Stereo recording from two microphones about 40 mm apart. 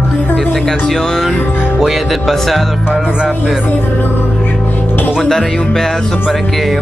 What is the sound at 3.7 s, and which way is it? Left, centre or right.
Music, left.